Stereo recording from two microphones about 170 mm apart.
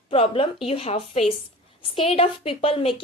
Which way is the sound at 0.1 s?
35° left (ahead or behind).